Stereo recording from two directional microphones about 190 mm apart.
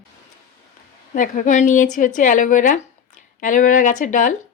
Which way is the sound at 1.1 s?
45° left (ahead or behind).